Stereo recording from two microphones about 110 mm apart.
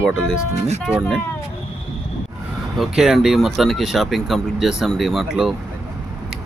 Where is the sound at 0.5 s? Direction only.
85° right.